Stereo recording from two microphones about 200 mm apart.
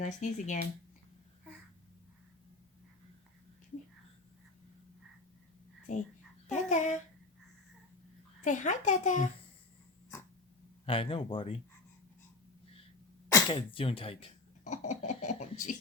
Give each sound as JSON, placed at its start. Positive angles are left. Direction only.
{"t": 0.0, "sound": "a child's voice", "side_deg": 40}
{"t": 5.9, "sound": "a child's voice", "side_deg": 35}
{"t": 8.4, "sound": "a child's voice", "side_deg": 40}
{"t": 10.8, "sound": "speech", "side_deg": 25}
{"t": 13.5, "sound": "speech", "side_deg": 25}